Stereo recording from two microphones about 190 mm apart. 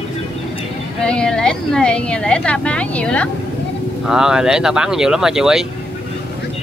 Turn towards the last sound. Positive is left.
turn(degrees=-5)  # may be behind; listen again after turning